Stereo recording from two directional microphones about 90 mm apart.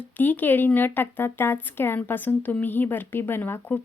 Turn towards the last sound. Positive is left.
turn(degrees=25)  # may be behind; listen again after turning